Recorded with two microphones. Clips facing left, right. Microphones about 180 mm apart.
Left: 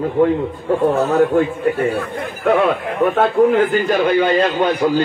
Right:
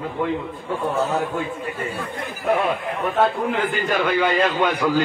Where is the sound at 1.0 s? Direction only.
60° left (ahead or behind).